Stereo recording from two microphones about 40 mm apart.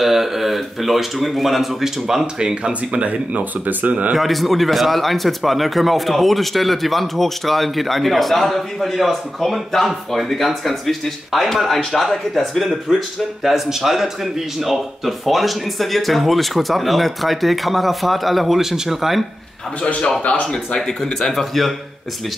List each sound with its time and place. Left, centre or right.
0.0 s speech: centre
2.3 s speech: right
3.1 s speech: right
4.1 s speech: centre
20.2 s speech: left
20.5 s speech: centre